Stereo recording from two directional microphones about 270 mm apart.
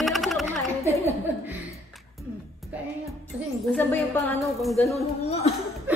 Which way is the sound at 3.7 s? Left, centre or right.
Centre.